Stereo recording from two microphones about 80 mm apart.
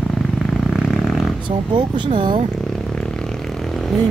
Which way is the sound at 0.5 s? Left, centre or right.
Centre.